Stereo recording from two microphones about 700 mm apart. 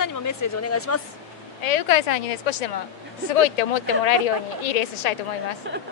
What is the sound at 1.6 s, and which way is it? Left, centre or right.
A woman's voice, left.